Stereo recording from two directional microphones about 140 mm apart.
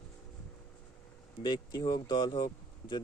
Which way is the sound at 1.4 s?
35° left (ahead or behind).